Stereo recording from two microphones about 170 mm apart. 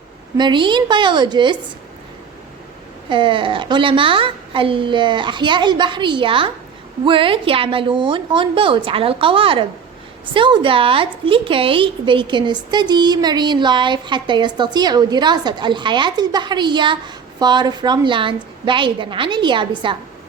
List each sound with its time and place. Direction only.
0.3 s a woman's voice: 25° right (ahead or behind)
3.1 s a woman's voice: 30° right (ahead or behind)